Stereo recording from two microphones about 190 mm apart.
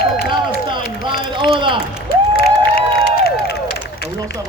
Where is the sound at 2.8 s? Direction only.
55° left (ahead or behind).